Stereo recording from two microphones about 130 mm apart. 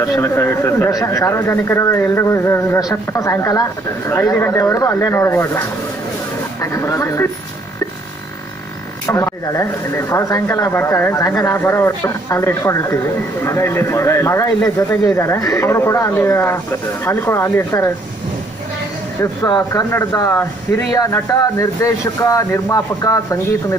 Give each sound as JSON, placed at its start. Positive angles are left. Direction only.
{"t": 0.0, "sound": "a man's voice", "side_deg": 20}
{"t": 6.6, "sound": "a man's voice", "side_deg": 25}
{"t": 9.0, "sound": "a man's voice", "side_deg": 25}
{"t": 19.4, "sound": "a man's voice", "side_deg": 30}
{"t": 20.2, "sound": "a man's voice", "side_deg": 20}